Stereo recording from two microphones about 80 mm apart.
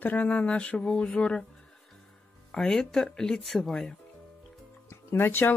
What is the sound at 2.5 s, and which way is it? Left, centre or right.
Speech, centre.